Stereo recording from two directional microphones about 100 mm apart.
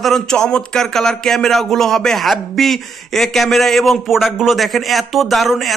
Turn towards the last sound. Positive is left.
turn(degrees=0)  # may be behind; listen again after turning